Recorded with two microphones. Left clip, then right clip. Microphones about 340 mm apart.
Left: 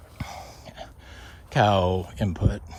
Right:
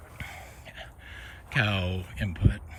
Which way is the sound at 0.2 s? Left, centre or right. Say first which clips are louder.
Left 4 dB; centre.